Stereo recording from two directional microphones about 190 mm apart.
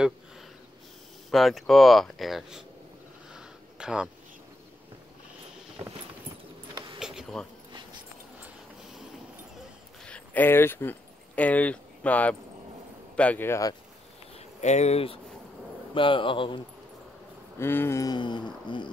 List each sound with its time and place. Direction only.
1.3 s speech: centre (ahead or behind)
3.3 s a sound: 5° right (ahead or behind)
7.0 s a sound: 5° right (ahead or behind)
10.0 s speech: 5° left (ahead or behind)
14.3 s speech: 35° left (ahead or behind)
17.6 s speech: 10° left (ahead or behind)